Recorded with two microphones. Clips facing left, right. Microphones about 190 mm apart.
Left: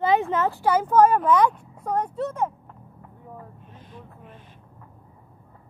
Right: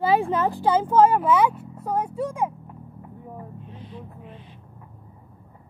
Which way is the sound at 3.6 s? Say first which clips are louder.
Right 5 dB; 50° left (ahead or behind).